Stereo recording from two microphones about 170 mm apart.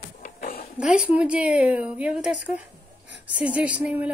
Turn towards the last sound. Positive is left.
turn(degrees=-10)  # may be behind; listen again after turning